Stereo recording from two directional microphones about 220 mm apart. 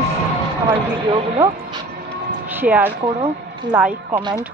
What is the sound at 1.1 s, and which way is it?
Speech, 20° right (ahead or behind).